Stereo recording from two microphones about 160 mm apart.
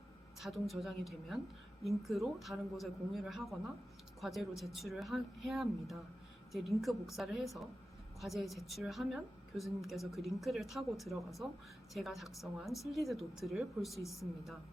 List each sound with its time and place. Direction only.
0.3 s a woman's voice: centre (ahead or behind)